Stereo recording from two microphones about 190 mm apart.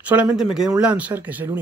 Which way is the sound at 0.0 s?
5° right (ahead or behind).